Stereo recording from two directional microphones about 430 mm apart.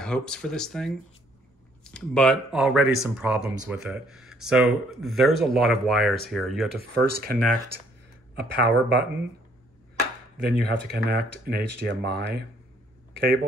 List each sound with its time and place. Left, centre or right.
0.0 s speech: centre
6.8 s speech: right
10.3 s speech: right
13.1 s a sound: right